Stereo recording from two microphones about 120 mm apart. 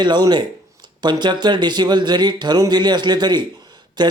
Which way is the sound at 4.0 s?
35° right (ahead or behind).